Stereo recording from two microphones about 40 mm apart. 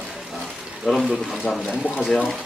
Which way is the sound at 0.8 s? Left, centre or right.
Centre.